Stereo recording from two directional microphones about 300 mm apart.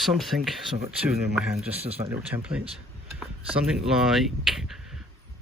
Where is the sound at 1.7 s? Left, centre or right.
Centre.